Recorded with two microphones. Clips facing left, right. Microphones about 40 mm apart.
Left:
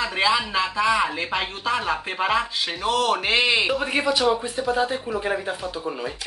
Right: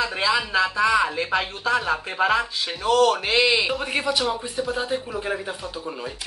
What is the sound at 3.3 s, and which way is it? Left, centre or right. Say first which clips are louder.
Speech: even; left.